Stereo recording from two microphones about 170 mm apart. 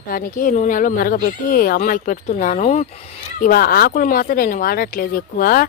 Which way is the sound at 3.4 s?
60° left (ahead or behind).